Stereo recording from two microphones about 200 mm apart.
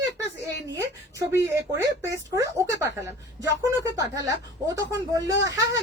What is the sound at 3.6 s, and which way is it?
Speech, 15° right (ahead or behind).